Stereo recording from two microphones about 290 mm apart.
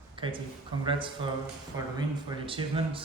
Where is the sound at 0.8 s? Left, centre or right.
Centre.